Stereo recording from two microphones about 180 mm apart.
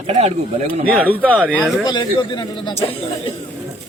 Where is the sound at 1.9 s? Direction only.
25° left (ahead or behind).